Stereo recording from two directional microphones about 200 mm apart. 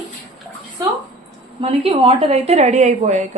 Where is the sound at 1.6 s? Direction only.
30° right (ahead or behind).